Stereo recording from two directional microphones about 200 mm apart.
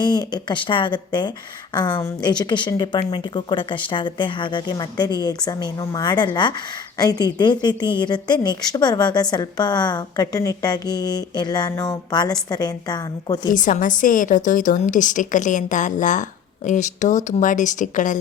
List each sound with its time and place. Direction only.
0.0 s a woman's voice: 20° left (ahead or behind)
13.5 s a woman's voice: 40° left (ahead or behind)